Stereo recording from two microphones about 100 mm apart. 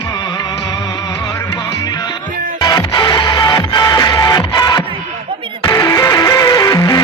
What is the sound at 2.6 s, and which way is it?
Music, 50° left (ahead or behind).